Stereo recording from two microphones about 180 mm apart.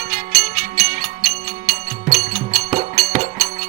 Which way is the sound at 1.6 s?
20° right (ahead or behind).